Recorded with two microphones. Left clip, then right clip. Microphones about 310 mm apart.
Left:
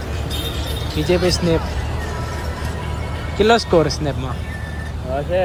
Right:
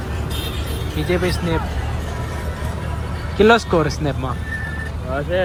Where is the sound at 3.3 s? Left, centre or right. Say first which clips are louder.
Even; centre.